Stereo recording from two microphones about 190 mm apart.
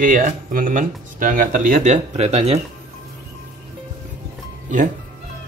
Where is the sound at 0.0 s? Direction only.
45° right (ahead or behind).